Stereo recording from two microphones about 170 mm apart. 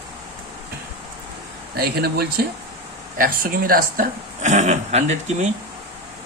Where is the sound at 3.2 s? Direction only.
60° right (ahead or behind); by 5.5 s 40° right (ahead or behind).